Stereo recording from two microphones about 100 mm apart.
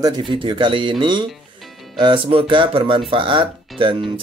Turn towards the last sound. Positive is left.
turn(degrees=-60)  # may be behind; listen again after turning